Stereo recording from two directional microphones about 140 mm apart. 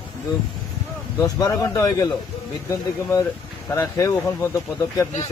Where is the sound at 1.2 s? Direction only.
25° left (ahead or behind).